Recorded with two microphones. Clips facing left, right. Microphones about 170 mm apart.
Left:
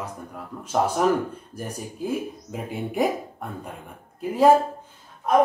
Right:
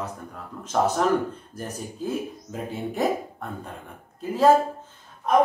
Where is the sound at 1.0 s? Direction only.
10° left (ahead or behind).